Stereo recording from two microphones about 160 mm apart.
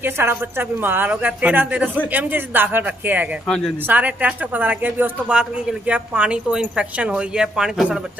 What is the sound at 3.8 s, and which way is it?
Speech, 10° right (ahead or behind).